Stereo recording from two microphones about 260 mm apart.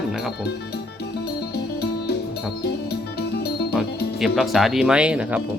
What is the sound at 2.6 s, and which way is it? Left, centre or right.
Music, left.